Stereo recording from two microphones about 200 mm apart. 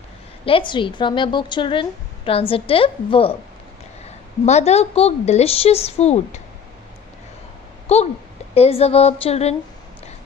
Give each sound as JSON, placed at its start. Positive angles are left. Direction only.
{"t": 0.4, "sound": "a woman's voice", "side_deg": 25}
{"t": 4.4, "sound": "a woman's voice", "side_deg": 35}
{"t": 7.9, "sound": "a woman's voice", "side_deg": 30}